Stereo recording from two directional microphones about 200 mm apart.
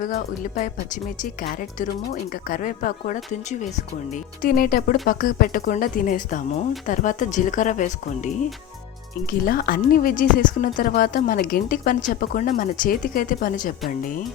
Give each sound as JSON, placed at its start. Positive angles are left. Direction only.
{"t": 0.0, "sound": "speech", "side_deg": 45}
{"t": 9.5, "sound": "speech", "side_deg": 45}